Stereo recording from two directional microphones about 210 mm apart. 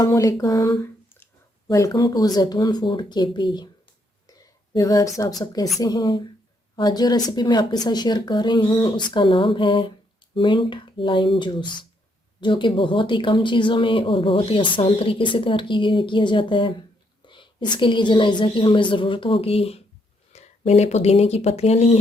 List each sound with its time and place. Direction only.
0.0 s speech: 15° left (ahead or behind)
4.4 s a sound: 15° left (ahead or behind)
5.4 s speech: 20° left (ahead or behind)